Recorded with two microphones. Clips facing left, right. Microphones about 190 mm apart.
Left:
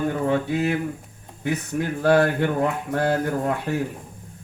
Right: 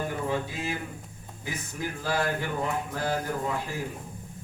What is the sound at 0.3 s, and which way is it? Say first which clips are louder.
Speech: left 9 dB; 65° left (ahead or behind).